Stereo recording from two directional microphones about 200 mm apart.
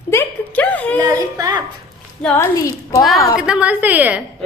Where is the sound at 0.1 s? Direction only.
10° left (ahead or behind).